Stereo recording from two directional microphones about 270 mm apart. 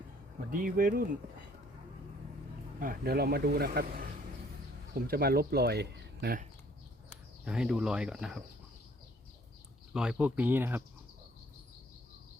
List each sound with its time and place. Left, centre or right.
0.5 s speech: right
2.8 s speech: right
7.4 s speech: centre
9.9 s speech: centre